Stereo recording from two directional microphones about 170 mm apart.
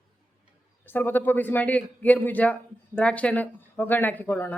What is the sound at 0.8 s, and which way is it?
Speech, 10° left (ahead or behind).